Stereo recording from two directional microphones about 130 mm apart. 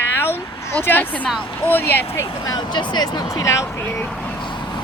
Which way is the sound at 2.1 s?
25° left (ahead or behind).